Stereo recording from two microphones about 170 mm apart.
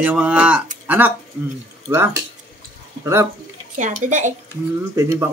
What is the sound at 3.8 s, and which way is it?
Speech, 45° right (ahead or behind).